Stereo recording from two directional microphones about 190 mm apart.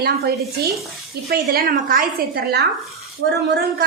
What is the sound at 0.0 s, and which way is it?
A woman's voice, 55° right (ahead or behind).